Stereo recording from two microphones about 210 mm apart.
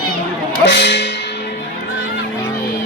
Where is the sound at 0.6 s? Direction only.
55° left (ahead or behind).